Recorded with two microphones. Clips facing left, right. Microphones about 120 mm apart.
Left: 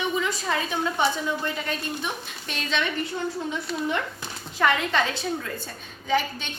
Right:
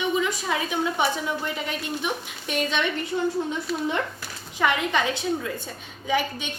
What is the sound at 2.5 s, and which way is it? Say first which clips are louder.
Speech: right 3 dB; 15° right (ahead or behind).